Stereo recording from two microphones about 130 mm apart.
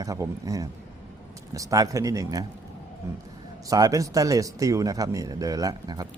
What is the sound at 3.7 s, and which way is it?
Speech, 25° right (ahead or behind).